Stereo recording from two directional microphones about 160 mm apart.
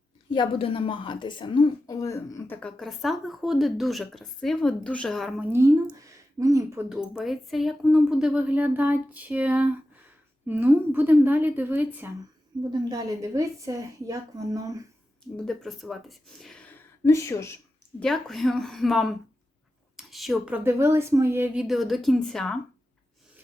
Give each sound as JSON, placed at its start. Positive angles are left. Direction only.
{"t": 0.3, "sound": "a woman's voice", "side_deg": 30}
{"t": 2.6, "sound": "speech", "side_deg": 5}
{"t": 5.5, "sound": "a woman's voice", "side_deg": -15}
{"t": 6.8, "sound": "a woman's voice", "side_deg": -5}
{"t": 12.7, "sound": "a woman's voice", "side_deg": -20}
{"t": 15.4, "sound": "speech", "side_deg": 0}
{"t": 18.0, "sound": "speech", "side_deg": 0}